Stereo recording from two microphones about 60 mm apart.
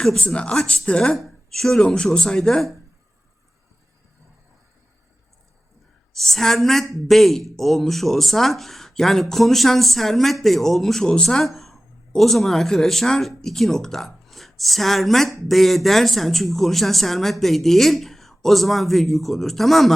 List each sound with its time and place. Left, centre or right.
0.0 s speech: centre
0.5 s speech: centre
1.1 s speech: centre
6.1 s a woman's voice: centre